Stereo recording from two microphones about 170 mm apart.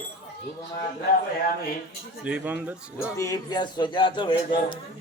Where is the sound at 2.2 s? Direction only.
10° right (ahead or behind).